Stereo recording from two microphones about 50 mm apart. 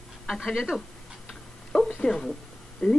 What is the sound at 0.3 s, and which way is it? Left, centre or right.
Speech, centre.